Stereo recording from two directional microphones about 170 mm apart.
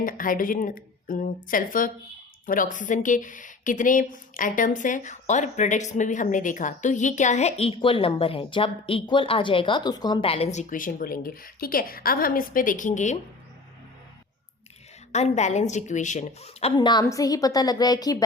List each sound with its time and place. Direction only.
0.0 s a woman's voice: 55° left (ahead or behind)
15.1 s a woman's voice: 40° left (ahead or behind)
16.7 s a woman's voice: 25° left (ahead or behind)